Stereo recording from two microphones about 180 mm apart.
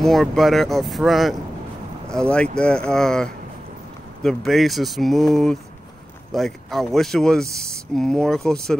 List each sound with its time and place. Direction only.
0.0 s speech: centre (ahead or behind)